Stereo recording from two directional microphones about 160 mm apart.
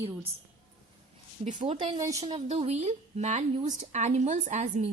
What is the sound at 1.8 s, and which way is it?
A woman's voice, 30° right (ahead or behind).